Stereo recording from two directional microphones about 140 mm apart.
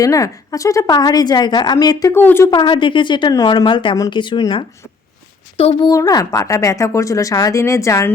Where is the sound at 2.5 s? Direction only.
35° left (ahead or behind).